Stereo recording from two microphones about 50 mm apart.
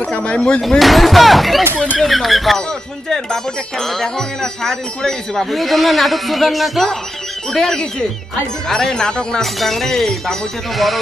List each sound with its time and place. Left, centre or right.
0.0 s a sound: left
0.6 s speech: centre
9.4 s speech: centre